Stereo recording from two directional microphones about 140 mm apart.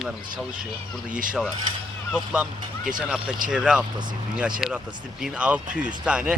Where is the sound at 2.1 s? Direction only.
5° right (ahead or behind).